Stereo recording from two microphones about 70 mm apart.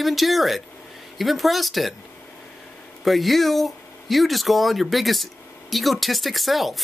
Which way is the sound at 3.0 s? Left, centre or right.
Centre.